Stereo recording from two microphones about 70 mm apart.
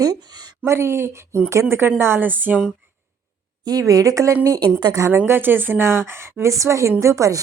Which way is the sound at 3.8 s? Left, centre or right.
Right.